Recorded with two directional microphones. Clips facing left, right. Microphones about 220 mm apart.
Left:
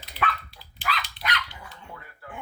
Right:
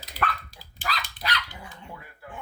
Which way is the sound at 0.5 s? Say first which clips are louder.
Left 1 dB; 40° right (ahead or behind).